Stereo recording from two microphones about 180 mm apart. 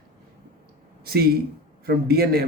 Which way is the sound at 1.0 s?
60° right (ahead or behind).